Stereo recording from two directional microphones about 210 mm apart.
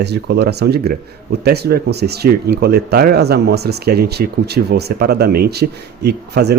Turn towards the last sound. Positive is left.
turn(degrees=-50)  # may be behind; listen again after turning